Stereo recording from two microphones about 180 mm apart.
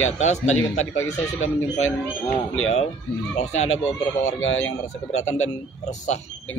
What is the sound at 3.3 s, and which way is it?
Speech, 35° left (ahead or behind).